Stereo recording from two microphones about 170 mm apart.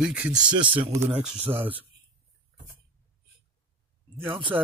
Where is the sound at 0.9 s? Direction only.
15° right (ahead or behind).